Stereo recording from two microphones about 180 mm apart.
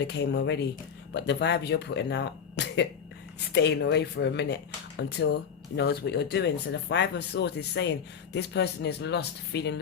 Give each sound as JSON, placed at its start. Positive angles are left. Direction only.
{"t": 0.1, "sound": "speech", "side_deg": 70}